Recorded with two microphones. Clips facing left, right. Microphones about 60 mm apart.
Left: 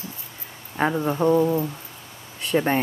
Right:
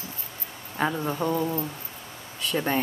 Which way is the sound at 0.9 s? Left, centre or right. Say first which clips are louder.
Left 7 dB; centre.